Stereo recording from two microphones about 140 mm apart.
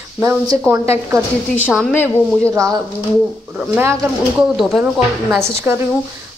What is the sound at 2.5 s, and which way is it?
Speech, 25° right (ahead or behind).